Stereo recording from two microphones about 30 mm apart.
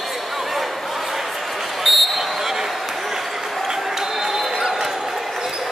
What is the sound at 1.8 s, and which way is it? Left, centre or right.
Basketball bounce, centre.